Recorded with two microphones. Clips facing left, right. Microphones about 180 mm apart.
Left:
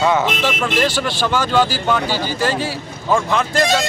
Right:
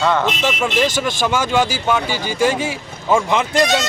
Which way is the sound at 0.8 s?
15° right (ahead or behind).